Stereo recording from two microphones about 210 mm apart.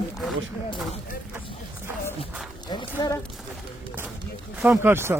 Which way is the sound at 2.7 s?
20° left (ahead or behind).